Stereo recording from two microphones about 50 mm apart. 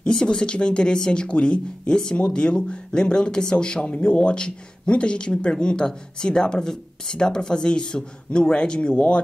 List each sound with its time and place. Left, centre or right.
0.0 s speech: centre